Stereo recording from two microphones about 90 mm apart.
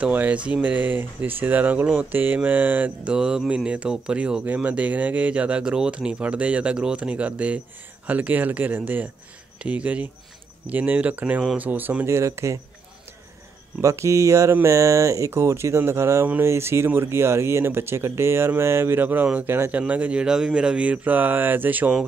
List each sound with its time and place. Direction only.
0.0 s speech: 15° right (ahead or behind)
3.1 s speech: 5° right (ahead or behind)
12.2 s speech: 35° right (ahead or behind)
13.7 s speech: 30° right (ahead or behind)